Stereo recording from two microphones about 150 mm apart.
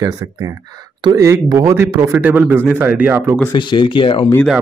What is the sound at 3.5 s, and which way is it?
Speech, 30° left (ahead or behind).